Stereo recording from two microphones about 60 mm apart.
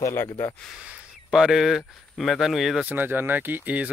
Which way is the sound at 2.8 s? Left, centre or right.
Right.